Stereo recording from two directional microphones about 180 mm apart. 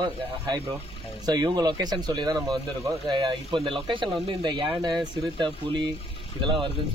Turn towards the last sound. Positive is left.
turn(degrees=-30)  # may be behind; listen again after turning